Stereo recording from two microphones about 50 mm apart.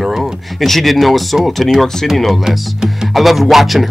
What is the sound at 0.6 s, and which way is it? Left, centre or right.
Speech, centre.